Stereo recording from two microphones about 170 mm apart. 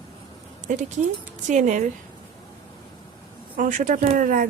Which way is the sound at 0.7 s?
50° right (ahead or behind).